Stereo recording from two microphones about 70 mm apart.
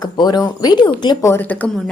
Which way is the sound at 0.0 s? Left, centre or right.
Left.